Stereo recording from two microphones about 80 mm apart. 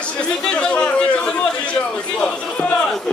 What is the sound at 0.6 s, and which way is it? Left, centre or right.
Speech, centre.